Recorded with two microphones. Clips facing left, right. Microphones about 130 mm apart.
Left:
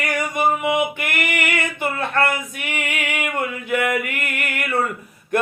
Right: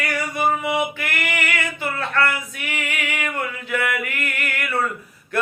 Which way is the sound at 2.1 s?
20° left (ahead or behind).